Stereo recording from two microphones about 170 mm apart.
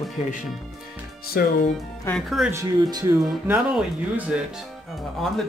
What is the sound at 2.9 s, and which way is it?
Speech, 20° right (ahead or behind).